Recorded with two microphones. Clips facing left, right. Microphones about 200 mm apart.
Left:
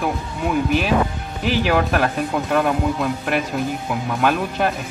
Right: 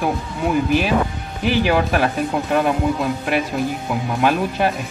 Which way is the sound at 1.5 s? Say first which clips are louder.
Right 1 dB; centre (ahead or behind).